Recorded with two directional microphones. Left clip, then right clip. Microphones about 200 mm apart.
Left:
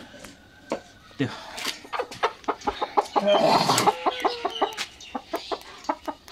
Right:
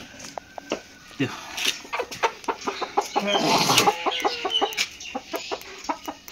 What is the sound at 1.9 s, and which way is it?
Chicken, 20° right (ahead or behind).